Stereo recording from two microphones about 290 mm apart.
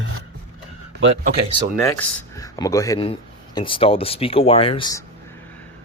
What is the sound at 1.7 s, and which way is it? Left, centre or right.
Speech, centre.